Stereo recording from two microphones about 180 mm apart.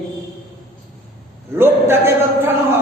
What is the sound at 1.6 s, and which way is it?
Speech, 10° right (ahead or behind).